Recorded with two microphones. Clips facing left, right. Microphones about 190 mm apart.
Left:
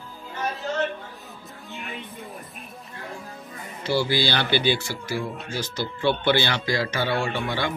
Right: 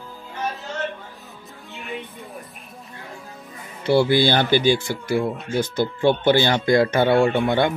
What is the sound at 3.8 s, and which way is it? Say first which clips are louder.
Speech: right 7 dB; 60° right (ahead or behind).